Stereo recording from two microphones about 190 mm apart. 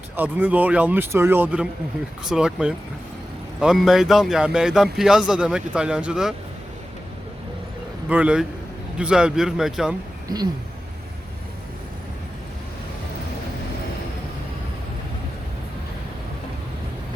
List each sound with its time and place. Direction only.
0.2 s a man's voice: 10° right (ahead or behind)
8.1 s a man's voice: 5° right (ahead or behind)
10.2 s speech: 20° right (ahead or behind)